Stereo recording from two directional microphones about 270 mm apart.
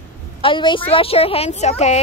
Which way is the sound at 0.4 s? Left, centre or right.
Centre.